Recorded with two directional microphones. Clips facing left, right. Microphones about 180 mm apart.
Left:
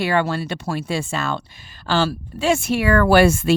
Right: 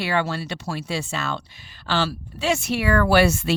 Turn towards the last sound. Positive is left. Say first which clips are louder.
# left 4 dB
turn(degrees=50)  # may be behind; listen again after turning